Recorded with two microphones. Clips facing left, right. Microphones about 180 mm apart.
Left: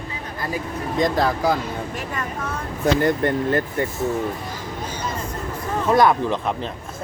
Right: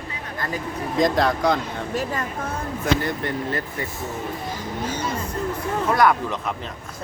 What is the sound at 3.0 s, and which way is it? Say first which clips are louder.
Speech: left 6 dB; 50° left (ahead or behind).